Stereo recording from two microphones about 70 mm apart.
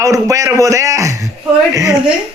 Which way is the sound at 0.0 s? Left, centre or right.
Right.